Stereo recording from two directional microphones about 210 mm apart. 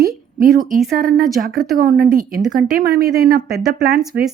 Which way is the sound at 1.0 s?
45° right (ahead or behind).